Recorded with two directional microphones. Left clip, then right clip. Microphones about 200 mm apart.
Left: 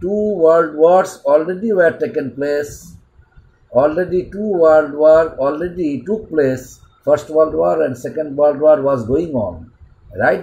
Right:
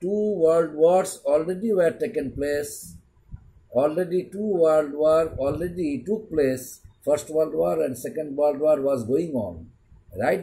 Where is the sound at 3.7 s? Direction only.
10° right (ahead or behind).